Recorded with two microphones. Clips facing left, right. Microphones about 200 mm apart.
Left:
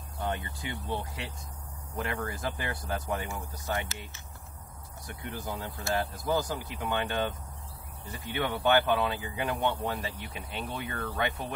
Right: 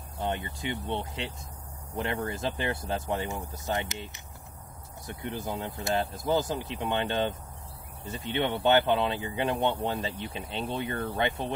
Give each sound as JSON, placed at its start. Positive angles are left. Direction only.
{"t": 0.2, "sound": "speech", "side_deg": -20}